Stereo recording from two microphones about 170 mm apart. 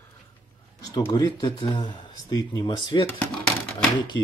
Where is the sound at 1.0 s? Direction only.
25° left (ahead or behind).